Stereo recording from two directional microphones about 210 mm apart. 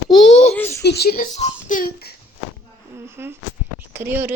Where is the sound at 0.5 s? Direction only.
10° left (ahead or behind).